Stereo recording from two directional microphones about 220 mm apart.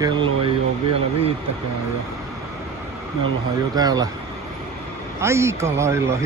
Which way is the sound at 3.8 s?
15° right (ahead or behind).